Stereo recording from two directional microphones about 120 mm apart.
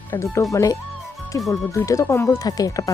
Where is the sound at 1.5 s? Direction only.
25° left (ahead or behind).